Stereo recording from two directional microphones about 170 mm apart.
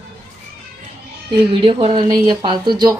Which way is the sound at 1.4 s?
30° right (ahead or behind).